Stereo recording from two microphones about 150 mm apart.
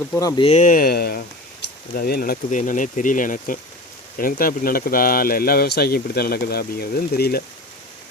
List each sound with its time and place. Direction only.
0.2 s speech: 25° left (ahead or behind)
0.4 s speech: 55° left (ahead or behind); by 1.2 s 90° left
2.0 s speech: 80° left